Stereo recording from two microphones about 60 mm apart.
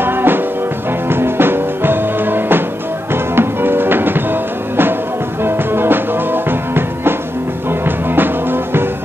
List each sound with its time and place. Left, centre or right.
0.0 s music: right